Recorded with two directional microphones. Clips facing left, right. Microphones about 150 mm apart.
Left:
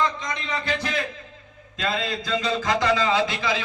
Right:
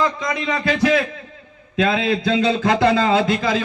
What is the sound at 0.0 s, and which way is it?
A man's voice, 75° right (ahead or behind).